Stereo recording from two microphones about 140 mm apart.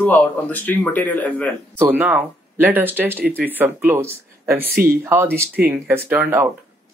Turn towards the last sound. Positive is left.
turn(degrees=-15)  # may be behind; listen again after turning